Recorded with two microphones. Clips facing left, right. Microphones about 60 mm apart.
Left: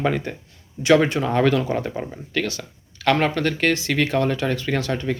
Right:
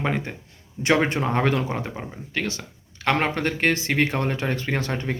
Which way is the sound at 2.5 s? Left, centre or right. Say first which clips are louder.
Left 1 dB; right.